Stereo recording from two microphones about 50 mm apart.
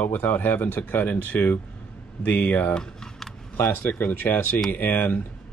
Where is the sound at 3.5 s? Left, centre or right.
Left.